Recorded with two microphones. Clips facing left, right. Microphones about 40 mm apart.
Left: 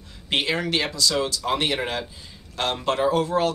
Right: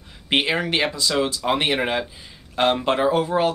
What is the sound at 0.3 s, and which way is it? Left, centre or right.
Speech, right.